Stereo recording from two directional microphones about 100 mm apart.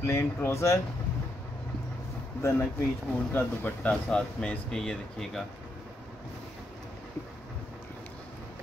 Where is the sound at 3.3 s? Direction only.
15° left (ahead or behind).